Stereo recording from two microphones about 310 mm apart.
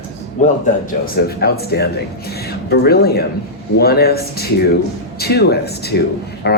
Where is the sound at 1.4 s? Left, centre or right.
Left.